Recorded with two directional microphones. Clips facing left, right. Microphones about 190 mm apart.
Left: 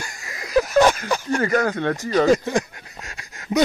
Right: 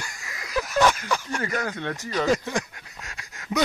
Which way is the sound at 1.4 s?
65° left (ahead or behind).